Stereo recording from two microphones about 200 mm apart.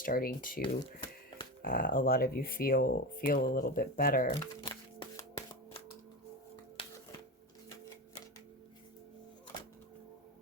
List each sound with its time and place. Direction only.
0.0 s speech: 45° left (ahead or behind)
0.6 s speech: 25° left (ahead or behind)
1.6 s speech: 45° left (ahead or behind)
4.4 s music: 20° left (ahead or behind)
6.8 s music: 25° left (ahead or behind)